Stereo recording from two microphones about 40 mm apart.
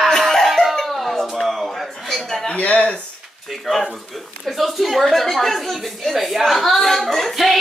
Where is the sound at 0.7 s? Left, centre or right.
Centre.